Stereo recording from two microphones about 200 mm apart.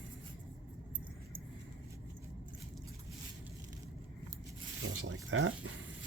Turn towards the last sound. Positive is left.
turn(degrees=-75)  # may be behind; listen again after turning